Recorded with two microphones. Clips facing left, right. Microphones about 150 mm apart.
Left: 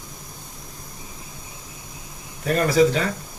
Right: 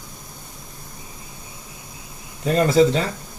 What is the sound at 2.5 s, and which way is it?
Speech, 25° right (ahead or behind).